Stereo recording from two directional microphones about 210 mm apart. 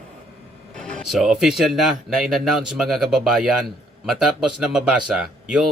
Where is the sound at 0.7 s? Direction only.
5° left (ahead or behind).